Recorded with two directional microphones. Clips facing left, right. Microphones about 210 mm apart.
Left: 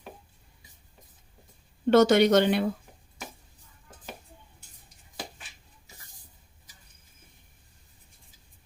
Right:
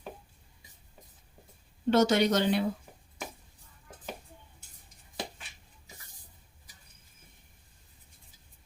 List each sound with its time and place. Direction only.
1.9 s speech: 55° left (ahead or behind)